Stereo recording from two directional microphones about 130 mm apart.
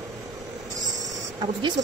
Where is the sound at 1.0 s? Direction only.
35° right (ahead or behind).